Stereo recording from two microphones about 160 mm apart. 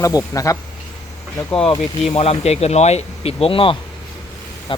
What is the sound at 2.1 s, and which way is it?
Speech, 40° left (ahead or behind).